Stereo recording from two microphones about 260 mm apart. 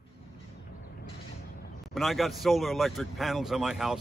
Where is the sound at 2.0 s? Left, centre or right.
Centre.